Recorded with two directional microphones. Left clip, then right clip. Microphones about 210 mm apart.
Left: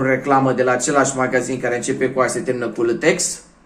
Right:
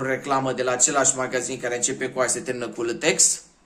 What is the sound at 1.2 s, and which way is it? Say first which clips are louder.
A man's voice: left 7 dB; 5° right (ahead or behind).